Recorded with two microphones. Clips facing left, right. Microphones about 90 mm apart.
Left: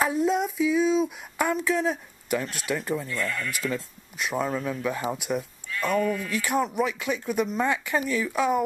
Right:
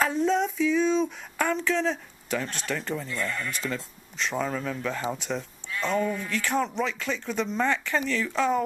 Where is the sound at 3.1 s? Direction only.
20° right (ahead or behind).